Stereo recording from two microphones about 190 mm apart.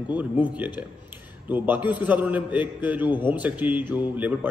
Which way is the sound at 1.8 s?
25° left (ahead or behind).